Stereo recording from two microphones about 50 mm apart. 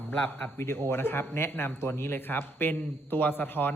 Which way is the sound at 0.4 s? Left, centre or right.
Left.